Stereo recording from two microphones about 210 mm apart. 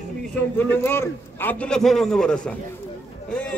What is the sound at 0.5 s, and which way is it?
A man's voice, 10° left (ahead or behind).